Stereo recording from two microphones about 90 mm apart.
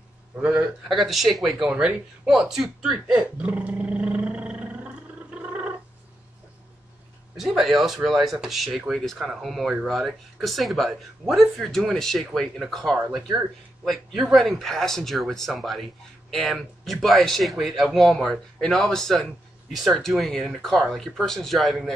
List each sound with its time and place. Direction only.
0.4 s a man's voice: 10° right (ahead or behind)
0.8 s speech: centre (ahead or behind)
3.1 s roar: 15° right (ahead or behind)
7.3 s speech: centre (ahead or behind)